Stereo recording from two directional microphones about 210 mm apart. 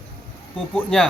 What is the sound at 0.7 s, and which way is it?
Speech, 5° left (ahead or behind).